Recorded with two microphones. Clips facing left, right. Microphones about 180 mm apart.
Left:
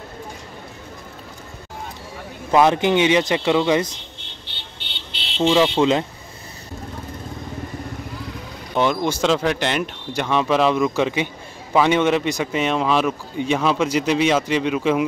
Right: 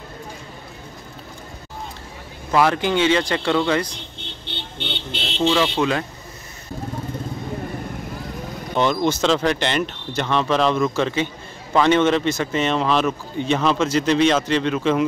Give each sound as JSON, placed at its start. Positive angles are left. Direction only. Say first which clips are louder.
{"t": 2.5, "sound": "a man's voice", "louder": "left 3 dB", "side_deg": 20}
{"t": 4.7, "sound": "vehicle", "louder": "right 10 dB", "side_deg": -50}
{"t": 5.5, "sound": "speech", "louder": "left 4 dB", "side_deg": 20}
{"t": 8.7, "sound": "a man's voice", "louder": "even", "side_deg": 10}